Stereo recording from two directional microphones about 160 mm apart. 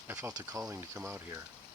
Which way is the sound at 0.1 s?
20° right (ahead or behind).